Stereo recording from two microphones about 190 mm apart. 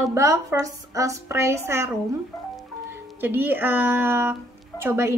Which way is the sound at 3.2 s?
10° right (ahead or behind).